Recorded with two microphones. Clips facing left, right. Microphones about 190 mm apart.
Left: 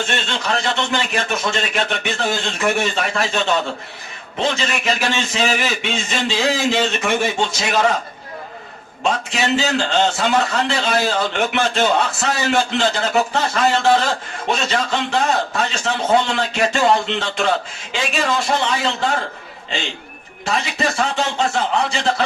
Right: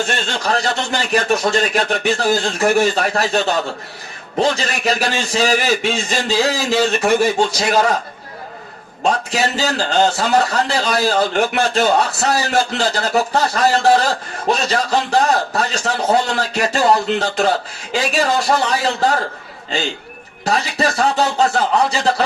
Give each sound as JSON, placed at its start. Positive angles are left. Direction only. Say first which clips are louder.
{"t": 0.3, "sound": "a man's voice", "louder": "right 2 dB", "side_deg": -40}
{"t": 9.0, "sound": "a man's voice", "louder": "right 2 dB", "side_deg": -40}
{"t": 20.4, "sound": "a man's voice", "louder": "right 3 dB", "side_deg": -40}